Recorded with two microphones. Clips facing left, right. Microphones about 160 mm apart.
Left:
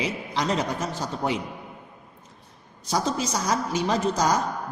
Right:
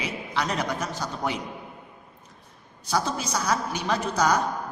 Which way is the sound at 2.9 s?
30° left (ahead or behind).